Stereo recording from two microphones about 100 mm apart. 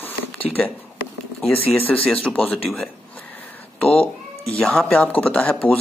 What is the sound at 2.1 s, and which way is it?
Speech, 5° left (ahead or behind).